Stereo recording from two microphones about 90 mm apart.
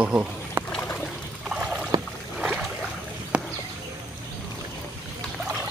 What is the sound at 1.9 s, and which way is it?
Rowboat, 50° right (ahead or behind).